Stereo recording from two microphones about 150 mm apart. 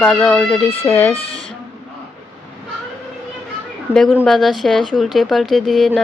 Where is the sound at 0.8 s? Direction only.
15° left (ahead or behind).